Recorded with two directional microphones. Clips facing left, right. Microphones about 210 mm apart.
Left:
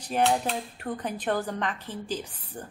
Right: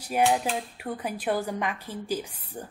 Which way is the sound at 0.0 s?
10° right (ahead or behind).